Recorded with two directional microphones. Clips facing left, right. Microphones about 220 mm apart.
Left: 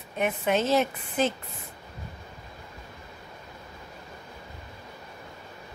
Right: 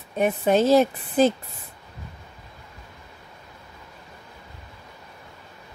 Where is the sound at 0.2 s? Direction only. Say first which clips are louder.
Right 6 dB; 35° right (ahead or behind).